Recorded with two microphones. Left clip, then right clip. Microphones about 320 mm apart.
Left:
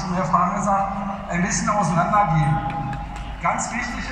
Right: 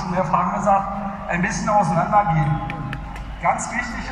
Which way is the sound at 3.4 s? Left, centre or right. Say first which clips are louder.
Right 2 dB; right.